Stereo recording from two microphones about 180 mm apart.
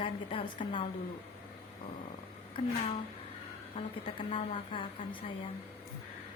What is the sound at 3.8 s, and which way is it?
A woman's voice, 30° left (ahead or behind).